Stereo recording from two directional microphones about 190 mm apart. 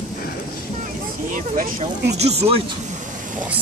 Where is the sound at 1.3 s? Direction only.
45° right (ahead or behind).